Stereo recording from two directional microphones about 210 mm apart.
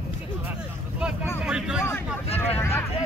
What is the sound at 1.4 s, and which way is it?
Vehicle, 5° right (ahead or behind).